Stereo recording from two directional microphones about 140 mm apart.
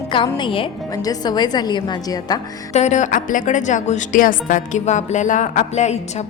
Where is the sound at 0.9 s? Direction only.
25° left (ahead or behind).